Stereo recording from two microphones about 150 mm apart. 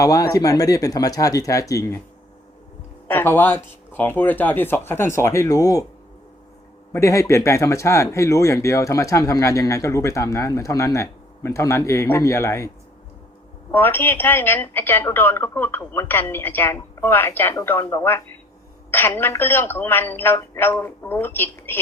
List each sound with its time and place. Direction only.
0.0 s speech: 25° left (ahead or behind)
3.1 s a woman's voice: 15° left (ahead or behind)
6.9 s a woman's voice: 20° left (ahead or behind)